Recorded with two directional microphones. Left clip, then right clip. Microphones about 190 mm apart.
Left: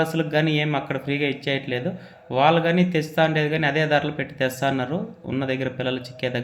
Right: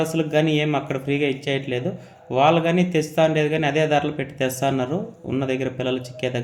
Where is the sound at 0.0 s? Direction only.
15° right (ahead or behind).